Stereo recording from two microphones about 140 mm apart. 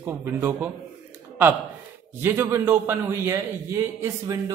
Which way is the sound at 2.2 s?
15° right (ahead or behind).